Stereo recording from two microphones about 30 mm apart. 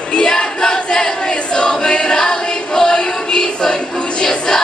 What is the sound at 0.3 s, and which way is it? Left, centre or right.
Choir, left.